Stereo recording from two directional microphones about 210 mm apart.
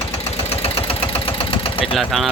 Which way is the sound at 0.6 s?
25° left (ahead or behind).